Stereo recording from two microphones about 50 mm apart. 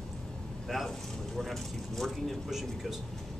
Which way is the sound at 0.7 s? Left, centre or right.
Centre.